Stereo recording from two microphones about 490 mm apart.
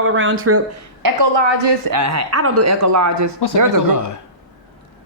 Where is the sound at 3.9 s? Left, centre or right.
Left.